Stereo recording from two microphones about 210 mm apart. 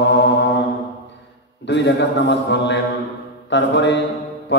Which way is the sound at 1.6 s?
55° left (ahead or behind).